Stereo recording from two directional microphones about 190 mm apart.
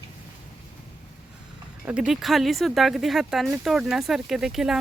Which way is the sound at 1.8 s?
5° right (ahead or behind).